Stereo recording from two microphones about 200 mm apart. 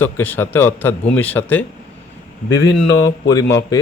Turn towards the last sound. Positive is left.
turn(degrees=15)  # may be behind; listen again after turning